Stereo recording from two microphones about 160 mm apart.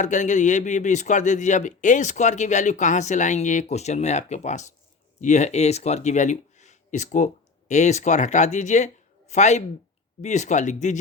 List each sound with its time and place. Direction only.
0.0 s a man's voice: 50° left (ahead or behind)